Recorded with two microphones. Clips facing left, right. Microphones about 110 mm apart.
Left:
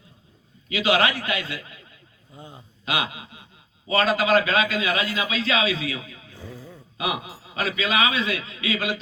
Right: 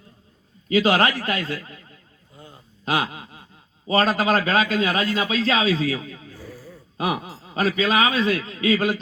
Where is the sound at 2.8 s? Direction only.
40° right (ahead or behind).